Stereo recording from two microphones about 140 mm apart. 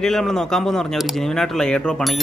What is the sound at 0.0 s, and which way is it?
Speech, 5° left (ahead or behind).